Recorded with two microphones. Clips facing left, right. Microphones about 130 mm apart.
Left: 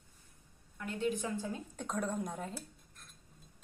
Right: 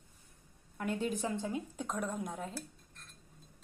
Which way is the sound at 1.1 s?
35° right (ahead or behind).